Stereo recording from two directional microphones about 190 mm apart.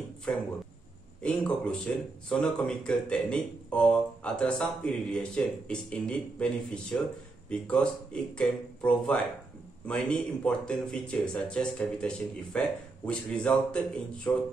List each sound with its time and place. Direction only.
0.3 s speech: 5° left (ahead or behind)